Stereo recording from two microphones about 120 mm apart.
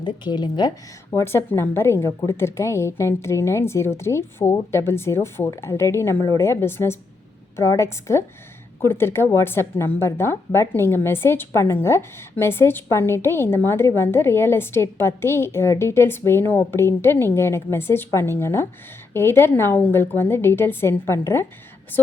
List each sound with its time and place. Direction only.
0.0 s speech: 40° left (ahead or behind)
1.2 s a woman's voice: 20° left (ahead or behind)